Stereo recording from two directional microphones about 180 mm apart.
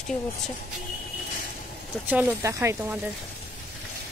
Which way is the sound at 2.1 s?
10° right (ahead or behind).